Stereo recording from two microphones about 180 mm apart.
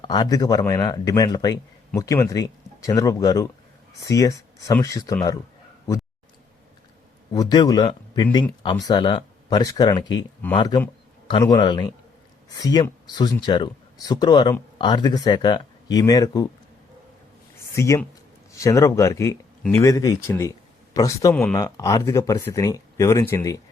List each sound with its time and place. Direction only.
0.0 s speech: 25° left (ahead or behind)
7.3 s speech: 25° left (ahead or behind)
17.7 s speech: 15° left (ahead or behind)
21.3 s speech: 10° left (ahead or behind)
21.6 s speech: 20° left (ahead or behind)